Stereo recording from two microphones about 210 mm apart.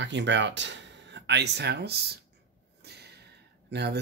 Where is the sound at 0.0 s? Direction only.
55° right (ahead or behind).